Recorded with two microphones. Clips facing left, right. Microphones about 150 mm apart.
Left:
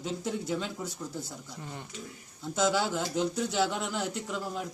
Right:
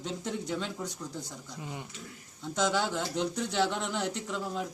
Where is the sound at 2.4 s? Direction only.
5° left (ahead or behind).